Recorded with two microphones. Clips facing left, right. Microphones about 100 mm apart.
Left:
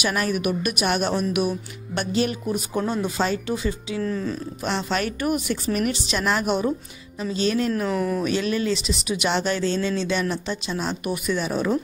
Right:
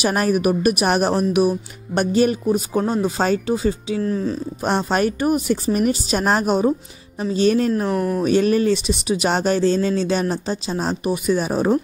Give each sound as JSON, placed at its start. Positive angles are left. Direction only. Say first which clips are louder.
{"t": 0.0, "sound": "speech", "louder": "right 5 dB", "side_deg": -40}
{"t": 2.5, "sound": "speech", "louder": "right 5 dB", "side_deg": -35}
{"t": 7.9, "sound": "speech", "louder": "right 3 dB", "side_deg": -10}
{"t": 8.2, "sound": "speech", "louder": "right 7 dB", "side_deg": -40}